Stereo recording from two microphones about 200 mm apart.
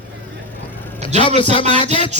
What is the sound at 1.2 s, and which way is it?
Speech, 25° left (ahead or behind).